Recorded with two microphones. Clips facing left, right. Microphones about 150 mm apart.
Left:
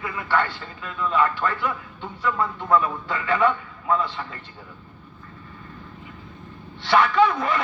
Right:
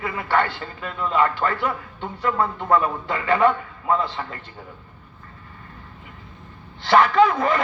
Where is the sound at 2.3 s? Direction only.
45° right (ahead or behind).